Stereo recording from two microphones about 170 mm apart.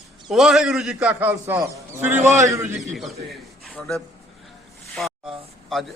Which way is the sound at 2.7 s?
Centre (ahead or behind).